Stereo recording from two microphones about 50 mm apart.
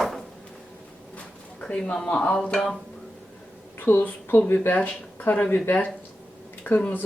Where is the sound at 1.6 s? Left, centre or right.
Centre.